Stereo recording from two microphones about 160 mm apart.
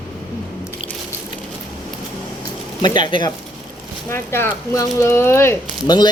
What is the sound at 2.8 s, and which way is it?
Speech, 30° left (ahead or behind).